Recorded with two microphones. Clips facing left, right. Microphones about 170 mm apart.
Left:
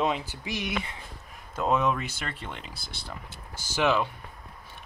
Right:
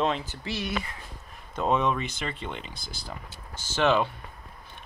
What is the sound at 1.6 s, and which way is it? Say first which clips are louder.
Speech: even; 5° left (ahead or behind).